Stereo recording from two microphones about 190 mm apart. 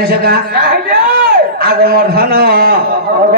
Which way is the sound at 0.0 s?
55° right (ahead or behind).